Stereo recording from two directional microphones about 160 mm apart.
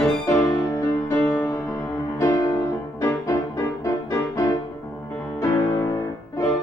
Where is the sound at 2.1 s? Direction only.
20° left (ahead or behind).